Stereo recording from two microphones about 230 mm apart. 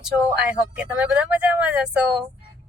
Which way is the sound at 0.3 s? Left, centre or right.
Centre.